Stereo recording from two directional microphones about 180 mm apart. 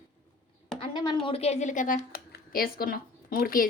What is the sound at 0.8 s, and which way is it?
Speech, 25° left (ahead or behind).